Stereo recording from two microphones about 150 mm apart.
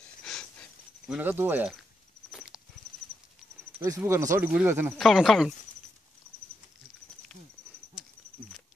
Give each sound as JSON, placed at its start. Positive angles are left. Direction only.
{"t": 0.2, "sound": "a sound", "side_deg": 5}
{"t": 1.2, "sound": "speech", "side_deg": -15}
{"t": 2.3, "sound": "walk", "side_deg": -5}
{"t": 4.0, "sound": "speech", "side_deg": -20}
{"t": 4.9, "sound": "speech", "side_deg": 0}